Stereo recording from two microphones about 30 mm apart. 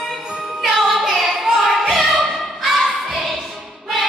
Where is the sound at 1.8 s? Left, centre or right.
Centre.